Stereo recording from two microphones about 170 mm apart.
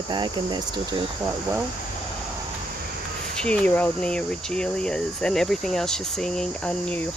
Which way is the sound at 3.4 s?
5° left (ahead or behind).